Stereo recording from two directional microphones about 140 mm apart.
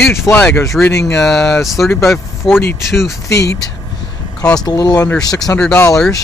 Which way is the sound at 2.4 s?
35° left (ahead or behind).